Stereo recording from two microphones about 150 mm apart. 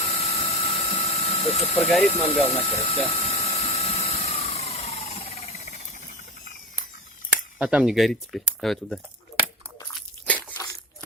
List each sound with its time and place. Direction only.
0.0 s ratchet: 40° left (ahead or behind)
2.0 s speech: 45° left (ahead or behind)
2.4 s a sound: 40° left (ahead or behind)
7.6 s speech: 5° right (ahead or behind)
10.2 s crunch: 10° left (ahead or behind)